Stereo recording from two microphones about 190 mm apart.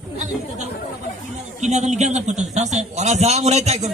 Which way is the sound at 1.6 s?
40° right (ahead or behind).